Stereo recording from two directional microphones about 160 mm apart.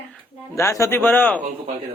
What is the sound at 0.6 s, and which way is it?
Mantra, 15° left (ahead or behind).